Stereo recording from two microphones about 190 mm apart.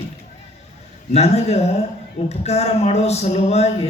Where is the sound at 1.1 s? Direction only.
35° left (ahead or behind).